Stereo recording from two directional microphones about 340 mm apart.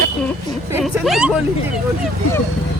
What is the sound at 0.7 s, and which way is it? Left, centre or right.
Speech, centre.